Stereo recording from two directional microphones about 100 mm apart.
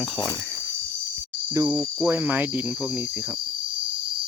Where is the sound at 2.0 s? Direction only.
20° right (ahead or behind).